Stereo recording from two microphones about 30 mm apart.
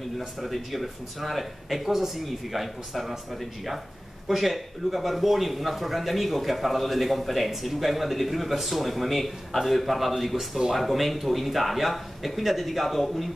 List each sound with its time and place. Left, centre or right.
0.4 s speech: centre